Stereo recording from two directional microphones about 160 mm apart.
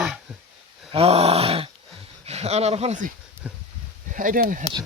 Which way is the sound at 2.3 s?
40° right (ahead or behind).